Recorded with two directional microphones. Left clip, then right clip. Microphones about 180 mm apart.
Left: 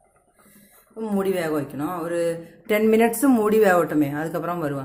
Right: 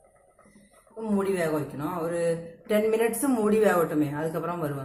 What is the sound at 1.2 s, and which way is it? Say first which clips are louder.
A man's voice: left 3 dB; 50° left (ahead or behind).